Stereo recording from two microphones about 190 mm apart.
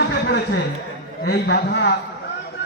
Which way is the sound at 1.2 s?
55° left (ahead or behind).